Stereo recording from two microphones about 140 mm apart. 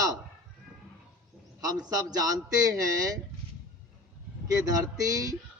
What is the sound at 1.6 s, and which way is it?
A man's voice, 25° right (ahead or behind).